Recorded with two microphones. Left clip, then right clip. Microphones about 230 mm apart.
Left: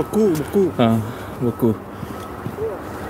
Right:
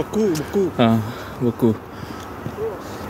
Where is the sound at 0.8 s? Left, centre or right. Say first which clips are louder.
Even; centre.